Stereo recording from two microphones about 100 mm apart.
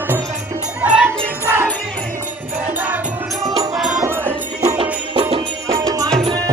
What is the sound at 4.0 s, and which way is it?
Music, 25° right (ahead or behind).